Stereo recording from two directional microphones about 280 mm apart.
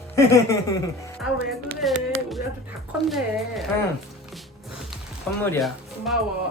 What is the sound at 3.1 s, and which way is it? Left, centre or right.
Speech, centre.